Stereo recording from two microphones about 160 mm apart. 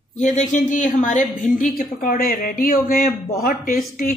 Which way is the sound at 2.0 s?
65° left (ahead or behind).